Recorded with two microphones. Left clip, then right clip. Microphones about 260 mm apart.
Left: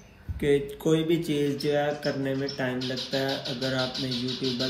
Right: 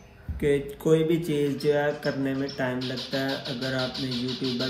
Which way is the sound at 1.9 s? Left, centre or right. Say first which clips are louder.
Right 1 dB; right.